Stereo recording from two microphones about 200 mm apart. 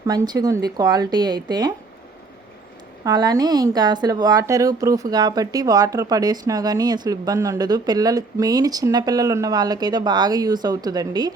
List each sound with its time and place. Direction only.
0.0 s speech: 20° right (ahead or behind)
3.0 s speech: 20° right (ahead or behind)